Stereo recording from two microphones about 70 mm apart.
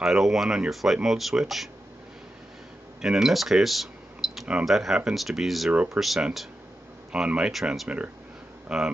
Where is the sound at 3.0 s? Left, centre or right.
Centre.